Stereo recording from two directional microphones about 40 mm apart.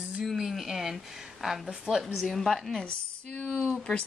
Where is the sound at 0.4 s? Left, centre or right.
Centre.